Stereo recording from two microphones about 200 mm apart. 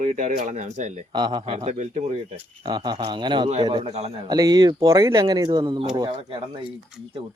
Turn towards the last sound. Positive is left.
turn(degrees=-25)  # may be behind; listen again after turning